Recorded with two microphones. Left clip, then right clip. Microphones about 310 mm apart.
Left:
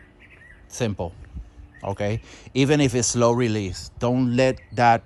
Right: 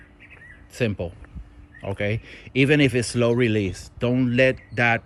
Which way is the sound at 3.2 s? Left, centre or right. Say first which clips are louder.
Even; left.